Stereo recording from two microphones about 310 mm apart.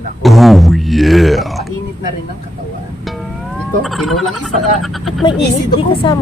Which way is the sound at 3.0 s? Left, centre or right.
Centre.